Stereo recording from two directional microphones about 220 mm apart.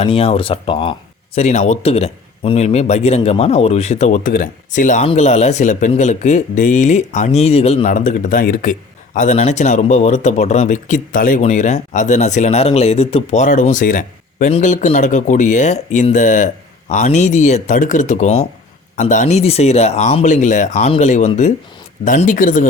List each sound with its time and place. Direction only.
0.0 s speech: 25° left (ahead or behind)